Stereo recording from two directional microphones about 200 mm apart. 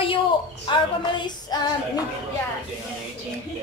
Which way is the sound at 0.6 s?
25° left (ahead or behind).